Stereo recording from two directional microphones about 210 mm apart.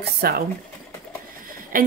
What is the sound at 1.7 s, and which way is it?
Speech, 45° right (ahead or behind).